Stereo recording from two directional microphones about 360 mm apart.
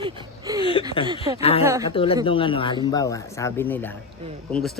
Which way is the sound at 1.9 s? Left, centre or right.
Centre.